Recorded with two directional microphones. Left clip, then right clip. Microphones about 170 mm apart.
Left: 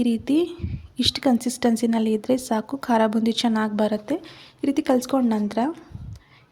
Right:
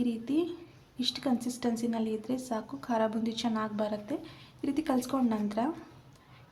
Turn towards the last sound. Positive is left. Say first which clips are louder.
# left 7 dB
turn(degrees=35)  # may be behind; listen again after turning